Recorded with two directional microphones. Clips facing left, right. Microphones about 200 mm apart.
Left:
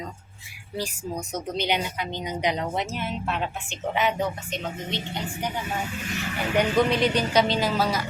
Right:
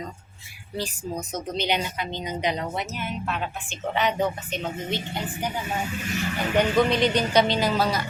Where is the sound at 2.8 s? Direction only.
30° left (ahead or behind).